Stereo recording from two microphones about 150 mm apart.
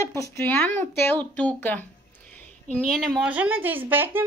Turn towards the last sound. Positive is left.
turn(degrees=-15)  # may be behind; listen again after turning